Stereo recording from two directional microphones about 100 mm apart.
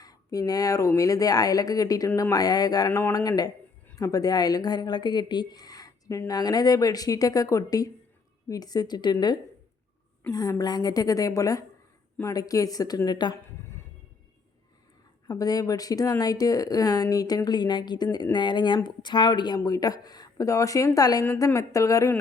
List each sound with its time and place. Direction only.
0.0 s speech: 40° left (ahead or behind)
2.0 s speech: 25° left (ahead or behind)
2.3 s speech: 40° left (ahead or behind)
10.2 s a woman's voice: 20° left (ahead or behind)
10.6 s speech: 40° left (ahead or behind)
13.3 s a sound: 25° left (ahead or behind)
15.3 s speech: 40° left (ahead or behind)